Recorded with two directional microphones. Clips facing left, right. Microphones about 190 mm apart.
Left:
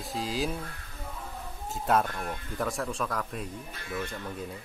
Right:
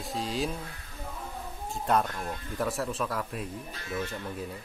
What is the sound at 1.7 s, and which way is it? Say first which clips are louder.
Speech: left 1 dB; 5° left (ahead or behind).